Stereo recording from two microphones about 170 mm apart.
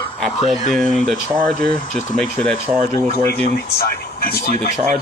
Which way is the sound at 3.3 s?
65° left (ahead or behind).